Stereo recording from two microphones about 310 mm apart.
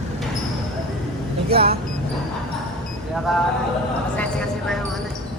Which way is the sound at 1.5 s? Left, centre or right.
Right.